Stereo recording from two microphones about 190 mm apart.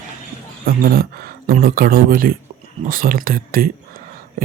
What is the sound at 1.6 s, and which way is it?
Speech, 50° right (ahead or behind).